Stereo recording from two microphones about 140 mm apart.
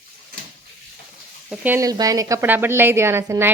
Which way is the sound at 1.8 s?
25° right (ahead or behind).